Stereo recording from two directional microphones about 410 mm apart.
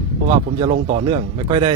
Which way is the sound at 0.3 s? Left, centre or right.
Centre.